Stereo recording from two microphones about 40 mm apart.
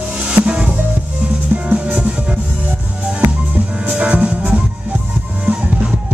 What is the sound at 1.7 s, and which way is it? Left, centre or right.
Music, right.